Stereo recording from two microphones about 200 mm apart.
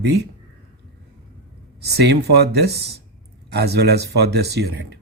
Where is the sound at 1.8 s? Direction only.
55° right (ahead or behind).